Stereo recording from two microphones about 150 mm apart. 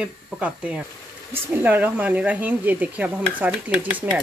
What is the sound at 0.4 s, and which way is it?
Speech, 10° right (ahead or behind).